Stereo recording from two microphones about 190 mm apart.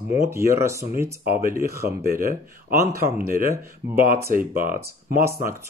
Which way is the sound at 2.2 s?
50° right (ahead or behind).